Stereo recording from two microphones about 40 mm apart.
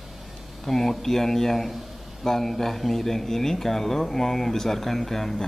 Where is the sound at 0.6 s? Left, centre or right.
Centre.